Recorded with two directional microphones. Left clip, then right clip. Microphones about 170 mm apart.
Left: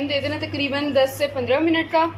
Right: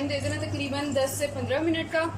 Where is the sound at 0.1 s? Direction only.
5° left (ahead or behind).